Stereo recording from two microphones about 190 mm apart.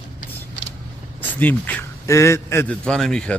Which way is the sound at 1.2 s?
10° left (ahead or behind).